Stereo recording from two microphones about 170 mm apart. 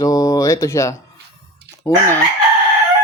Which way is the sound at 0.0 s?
20° left (ahead or behind).